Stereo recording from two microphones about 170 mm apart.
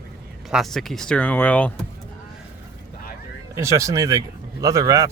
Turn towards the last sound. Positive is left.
turn(degrees=-20)  # may be behind; listen again after turning